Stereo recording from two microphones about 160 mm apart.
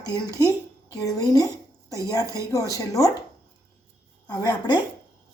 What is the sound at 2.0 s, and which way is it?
Speech, 20° left (ahead or behind).